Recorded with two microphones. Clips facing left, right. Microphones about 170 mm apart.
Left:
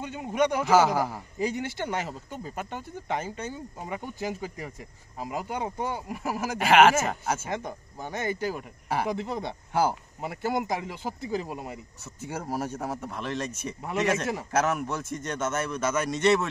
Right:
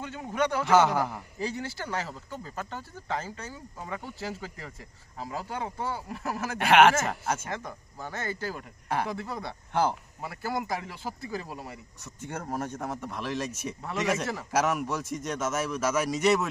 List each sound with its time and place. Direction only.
0.0 s speech: 15° left (ahead or behind)
0.7 s a man's voice: 5° left (ahead or behind)
1.4 s a man's voice: 20° left (ahead or behind)
7.4 s speech: 20° left (ahead or behind)
9.1 s speech: 20° left (ahead or behind)
9.7 s speech: 5° left (ahead or behind)
10.2 s speech: 20° left (ahead or behind)
12.2 s a man's voice: 5° left (ahead or behind)